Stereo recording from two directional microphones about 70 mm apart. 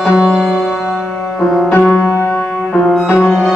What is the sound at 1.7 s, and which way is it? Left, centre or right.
Music, left.